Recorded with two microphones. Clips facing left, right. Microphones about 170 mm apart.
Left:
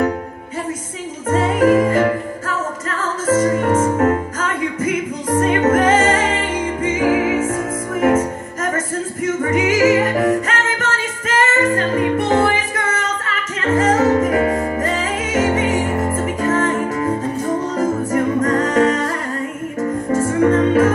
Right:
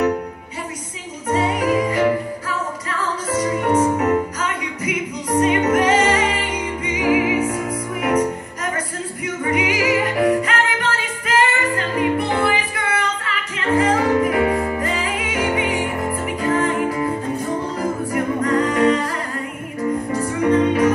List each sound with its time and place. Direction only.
1.3 s music: 50° left (ahead or behind)
8.7 s music: 45° left (ahead or behind)